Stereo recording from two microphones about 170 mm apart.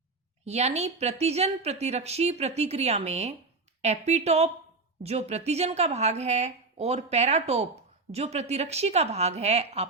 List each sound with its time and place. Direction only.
0.4 s a woman's voice: 40° right (ahead or behind)